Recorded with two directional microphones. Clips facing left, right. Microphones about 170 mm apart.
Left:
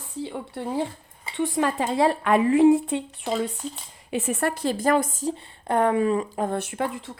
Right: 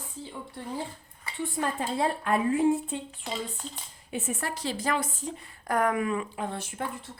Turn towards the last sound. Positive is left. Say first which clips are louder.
# left 7 dB
turn(degrees=90)